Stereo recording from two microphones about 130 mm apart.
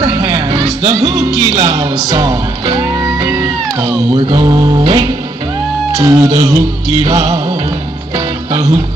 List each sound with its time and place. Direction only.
0.0 s music: 35° right (ahead or behind)
5.9 s speech: 25° right (ahead or behind)
7.1 s music: 30° right (ahead or behind)